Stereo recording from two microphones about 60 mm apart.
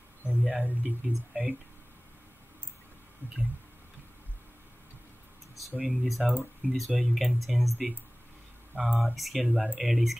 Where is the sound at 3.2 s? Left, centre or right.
Left.